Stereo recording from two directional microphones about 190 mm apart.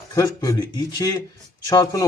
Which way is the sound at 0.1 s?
20° left (ahead or behind).